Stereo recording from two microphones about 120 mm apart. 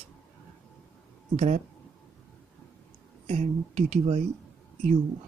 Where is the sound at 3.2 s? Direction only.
75° right (ahead or behind).